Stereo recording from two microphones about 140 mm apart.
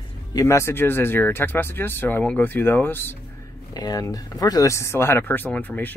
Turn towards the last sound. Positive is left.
turn(degrees=10)  # may be behind; listen again after turning